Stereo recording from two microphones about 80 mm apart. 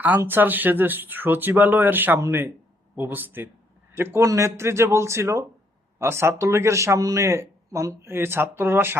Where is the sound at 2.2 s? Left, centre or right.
Right.